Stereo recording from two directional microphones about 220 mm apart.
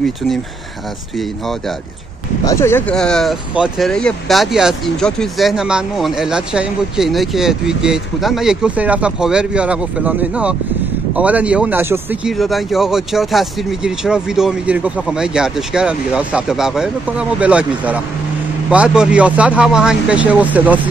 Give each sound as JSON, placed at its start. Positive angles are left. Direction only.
{"t": 2.4, "sound": "speech", "side_deg": 10}